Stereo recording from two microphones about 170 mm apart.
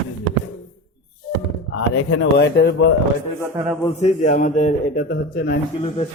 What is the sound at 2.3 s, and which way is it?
Speech, 75° left (ahead or behind).